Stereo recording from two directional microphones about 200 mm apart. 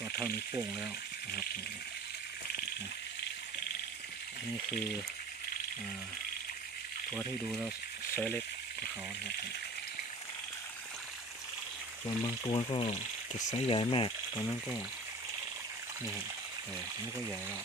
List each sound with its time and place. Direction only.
8.1 s speech: 10° left (ahead or behind)
12.0 s speech: 25° left (ahead or behind)